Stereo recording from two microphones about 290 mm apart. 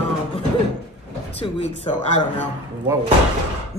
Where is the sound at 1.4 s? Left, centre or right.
Left.